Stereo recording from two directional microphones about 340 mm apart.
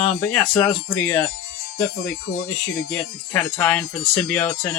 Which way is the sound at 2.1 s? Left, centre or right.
Left.